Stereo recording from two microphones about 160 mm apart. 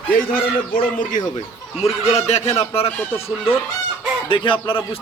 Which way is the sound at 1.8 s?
40° left (ahead or behind).